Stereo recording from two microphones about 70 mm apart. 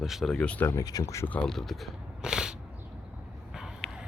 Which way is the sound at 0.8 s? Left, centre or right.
Left.